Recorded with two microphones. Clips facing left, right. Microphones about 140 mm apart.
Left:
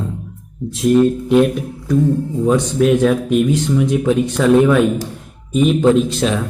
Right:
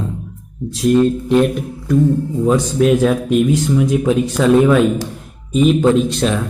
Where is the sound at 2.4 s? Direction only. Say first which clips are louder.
Even; centre (ahead or behind).